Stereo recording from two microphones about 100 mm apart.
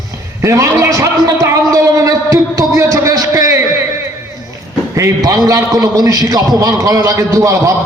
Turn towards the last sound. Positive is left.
turn(degrees=-35)  # may be behind; listen again after turning